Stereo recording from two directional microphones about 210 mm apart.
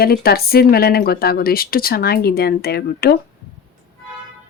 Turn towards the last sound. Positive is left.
turn(degrees=50)  # may be behind; listen again after turning